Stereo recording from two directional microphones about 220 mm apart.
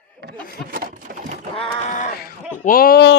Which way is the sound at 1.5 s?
30° left (ahead or behind).